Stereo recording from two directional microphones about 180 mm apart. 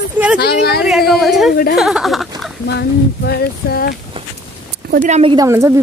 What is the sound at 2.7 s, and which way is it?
Speech, 65° left (ahead or behind).